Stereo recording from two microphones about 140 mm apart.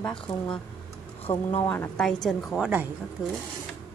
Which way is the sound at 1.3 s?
25° left (ahead or behind).